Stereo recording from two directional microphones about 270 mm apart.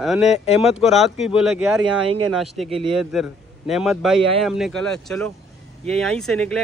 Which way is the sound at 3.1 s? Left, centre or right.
Centre.